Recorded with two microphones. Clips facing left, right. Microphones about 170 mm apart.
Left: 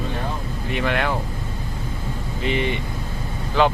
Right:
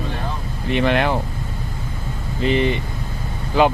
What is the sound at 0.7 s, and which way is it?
Speech, 25° right (ahead or behind).